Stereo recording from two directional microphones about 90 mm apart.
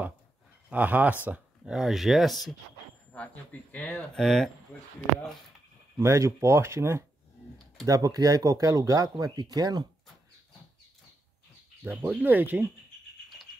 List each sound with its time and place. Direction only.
0.7 s speech: 20° right (ahead or behind)
1.7 s speech: 5° right (ahead or behind)
3.7 s speech: 15° left (ahead or behind)
4.2 s speech: 5° left (ahead or behind)
5.9 s speech: 35° right (ahead or behind)
7.8 s speech: 40° right (ahead or behind)
11.8 s speech: 25° right (ahead or behind)